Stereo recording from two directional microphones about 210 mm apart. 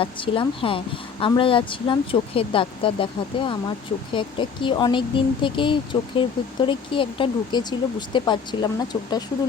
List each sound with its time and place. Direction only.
0.0 s speech: 25° left (ahead or behind)